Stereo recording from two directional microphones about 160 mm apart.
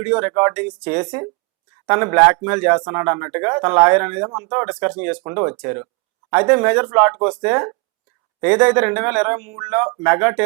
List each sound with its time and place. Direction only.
0.0 s speech: 10° right (ahead or behind)
1.0 s speech: 20° right (ahead or behind)
4.3 s speech: 25° right (ahead or behind)
4.5 s speech: 10° right (ahead or behind)